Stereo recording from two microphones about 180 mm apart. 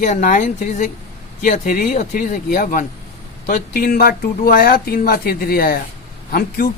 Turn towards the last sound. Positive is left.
turn(degrees=50)  # may be behind; listen again after turning